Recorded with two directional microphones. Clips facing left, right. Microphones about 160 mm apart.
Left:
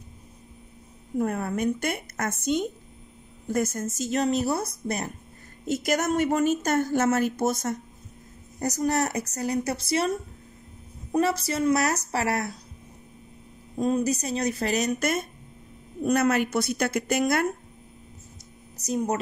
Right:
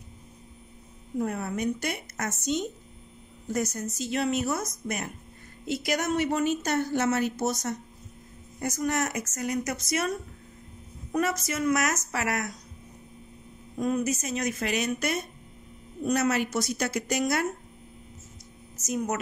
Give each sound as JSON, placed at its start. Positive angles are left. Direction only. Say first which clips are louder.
{"t": 1.2, "sound": "a woman's voice", "louder": "left 3 dB", "side_deg": 55}
{"t": 5.7, "sound": "speech", "louder": "left 3 dB", "side_deg": 45}
{"t": 8.5, "sound": "a woman's voice", "louder": "left 3 dB", "side_deg": 35}
{"t": 13.7, "sound": "a woman's voice", "louder": "left 3 dB", "side_deg": 30}
{"t": 18.8, "sound": "a woman's voice", "louder": "left 3 dB", "side_deg": 30}